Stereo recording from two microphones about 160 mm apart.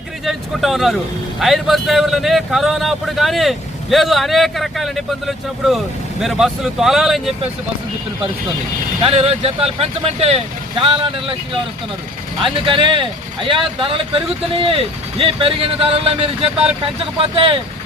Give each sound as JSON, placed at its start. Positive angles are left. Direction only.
{"t": 0.3, "sound": "speech", "side_deg": 0}
{"t": 9.0, "sound": "speech", "side_deg": -35}
{"t": 12.4, "sound": "speech", "side_deg": -30}